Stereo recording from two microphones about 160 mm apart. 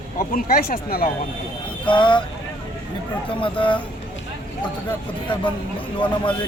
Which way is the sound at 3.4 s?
30° left (ahead or behind).